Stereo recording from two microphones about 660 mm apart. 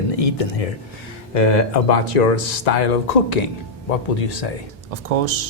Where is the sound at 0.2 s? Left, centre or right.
Left.